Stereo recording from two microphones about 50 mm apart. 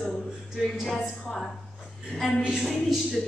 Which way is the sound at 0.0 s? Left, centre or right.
Centre.